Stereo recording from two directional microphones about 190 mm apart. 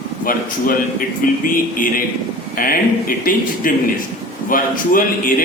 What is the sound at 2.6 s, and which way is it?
A man's voice, 50° left (ahead or behind).